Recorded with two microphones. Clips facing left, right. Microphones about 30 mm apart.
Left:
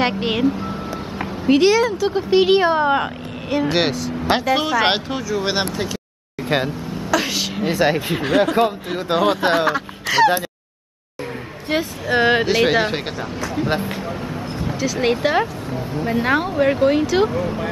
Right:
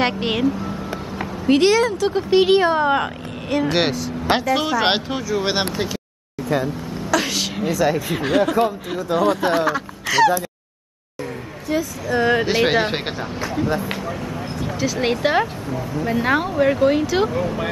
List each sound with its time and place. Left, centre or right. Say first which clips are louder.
0.0 s speech: left 1 dB; centre
1.5 s speech: left 1 dB; centre
6.5 s speech: left 1 dB; left
7.1 s a woman's voice: even; centre
7.6 s speech: left 2 dB; left
9.7 s a sound: left 1 dB; left
11.7 s speech: left 2 dB; left
12.4 s speech: left 1 dB; centre
14.8 s speech: left 1 dB; centre
15.7 s speech: even; left
16.1 s speech: left 1 dB; centre